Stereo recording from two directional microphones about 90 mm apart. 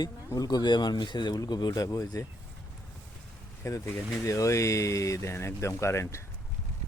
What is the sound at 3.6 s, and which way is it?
Speech, 35° left (ahead or behind).